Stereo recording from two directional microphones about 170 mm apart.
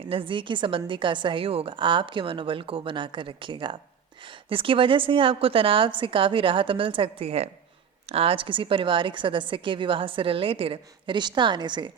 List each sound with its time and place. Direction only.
0.1 s a woman's voice: 30° right (ahead or behind)